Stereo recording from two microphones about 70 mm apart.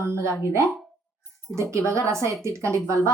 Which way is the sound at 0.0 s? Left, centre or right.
Right.